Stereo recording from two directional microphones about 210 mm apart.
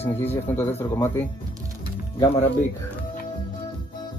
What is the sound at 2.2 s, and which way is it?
Speech, 25° left (ahead or behind).